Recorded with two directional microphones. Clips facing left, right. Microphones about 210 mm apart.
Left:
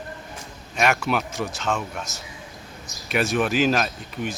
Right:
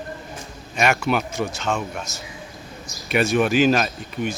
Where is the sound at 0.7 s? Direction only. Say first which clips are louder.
Right 2 dB; centre (ahead or behind).